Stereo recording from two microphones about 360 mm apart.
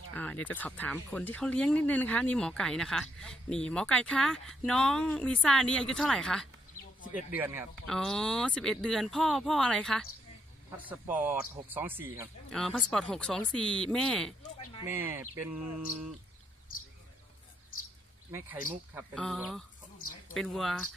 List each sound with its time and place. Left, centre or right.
0.1 s speech: centre
18.3 s speech: centre